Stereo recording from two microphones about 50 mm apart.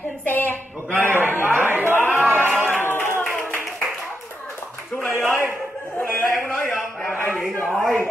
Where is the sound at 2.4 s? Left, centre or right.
Right.